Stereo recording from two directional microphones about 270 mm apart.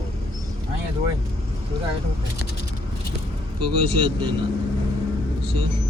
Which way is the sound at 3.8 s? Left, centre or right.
Right.